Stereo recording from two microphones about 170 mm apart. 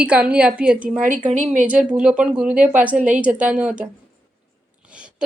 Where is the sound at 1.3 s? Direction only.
45° right (ahead or behind).